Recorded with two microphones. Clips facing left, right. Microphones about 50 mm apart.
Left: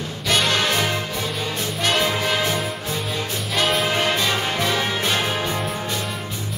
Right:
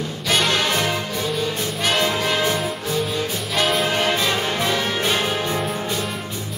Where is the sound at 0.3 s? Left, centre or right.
Centre.